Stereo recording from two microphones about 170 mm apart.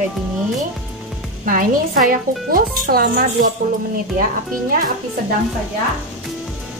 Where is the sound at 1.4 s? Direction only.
55° right (ahead or behind).